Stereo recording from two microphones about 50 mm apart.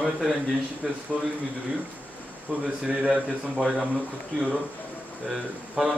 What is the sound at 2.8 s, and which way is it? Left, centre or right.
Speech, centre.